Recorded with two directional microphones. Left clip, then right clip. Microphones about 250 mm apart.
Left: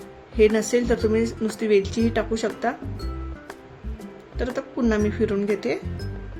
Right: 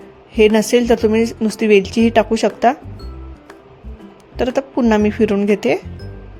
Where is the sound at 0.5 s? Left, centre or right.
Right.